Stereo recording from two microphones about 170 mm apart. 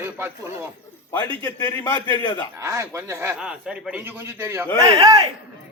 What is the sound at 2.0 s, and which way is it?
Speech, 25° left (ahead or behind).